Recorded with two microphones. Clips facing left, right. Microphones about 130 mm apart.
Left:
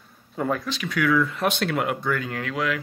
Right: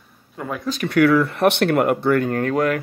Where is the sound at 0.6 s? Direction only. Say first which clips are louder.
Right 7 dB; 55° right (ahead or behind).